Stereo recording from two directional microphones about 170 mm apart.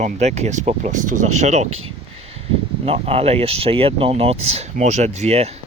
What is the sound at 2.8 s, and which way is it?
Speech, 35° right (ahead or behind).